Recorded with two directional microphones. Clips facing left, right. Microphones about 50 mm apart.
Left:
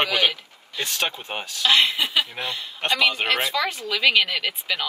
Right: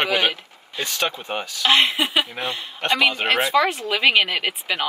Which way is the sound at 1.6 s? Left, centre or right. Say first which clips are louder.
Right 2 dB; right.